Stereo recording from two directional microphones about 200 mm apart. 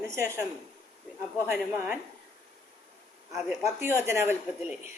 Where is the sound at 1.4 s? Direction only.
10° right (ahead or behind).